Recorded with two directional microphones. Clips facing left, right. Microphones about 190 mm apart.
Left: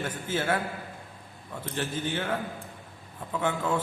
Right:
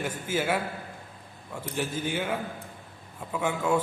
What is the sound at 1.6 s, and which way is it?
A man's voice, 10° right (ahead or behind).